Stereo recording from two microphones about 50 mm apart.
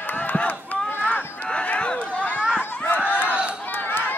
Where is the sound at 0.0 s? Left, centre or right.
Left.